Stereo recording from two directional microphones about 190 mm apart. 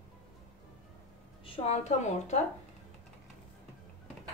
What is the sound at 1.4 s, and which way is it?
A woman's voice, 30° left (ahead or behind).